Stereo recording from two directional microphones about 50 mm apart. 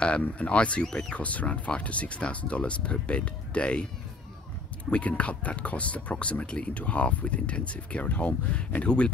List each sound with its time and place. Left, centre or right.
0.2 s speech: left
0.8 s speech: centre
1.1 s speech: left
4.9 s speech: left